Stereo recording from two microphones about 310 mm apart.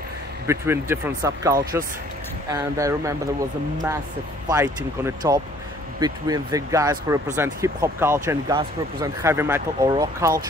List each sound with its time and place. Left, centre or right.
0.5 s speech: centre
4.5 s speech: centre